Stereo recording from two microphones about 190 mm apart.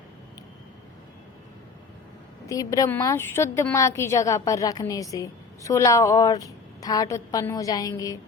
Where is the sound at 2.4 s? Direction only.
20° left (ahead or behind).